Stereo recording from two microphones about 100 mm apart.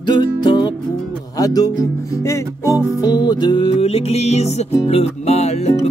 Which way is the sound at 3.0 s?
45° left (ahead or behind).